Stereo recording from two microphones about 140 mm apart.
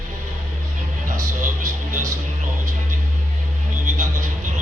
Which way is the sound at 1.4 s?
70° right (ahead or behind).